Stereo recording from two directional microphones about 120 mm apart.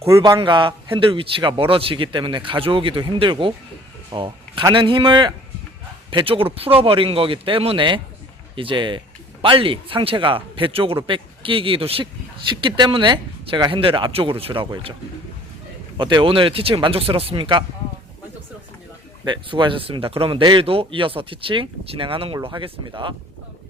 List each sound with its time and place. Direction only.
0.2 s speech: 40° right (ahead or behind)
16.0 s speech: 40° right (ahead or behind)
19.2 s speech: 40° right (ahead or behind)